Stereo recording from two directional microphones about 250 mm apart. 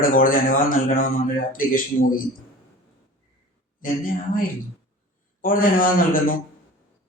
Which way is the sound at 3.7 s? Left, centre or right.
Left.